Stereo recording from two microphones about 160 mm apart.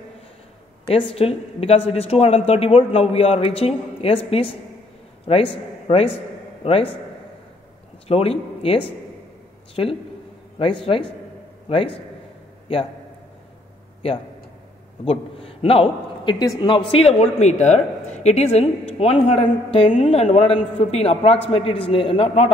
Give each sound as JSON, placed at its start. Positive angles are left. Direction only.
{"t": 0.8, "sound": "a man's voice", "side_deg": 35}
{"t": 8.1, "sound": "a man's voice", "side_deg": 35}
{"t": 10.6, "sound": "a man's voice", "side_deg": 35}
{"t": 15.0, "sound": "a man's voice", "side_deg": 35}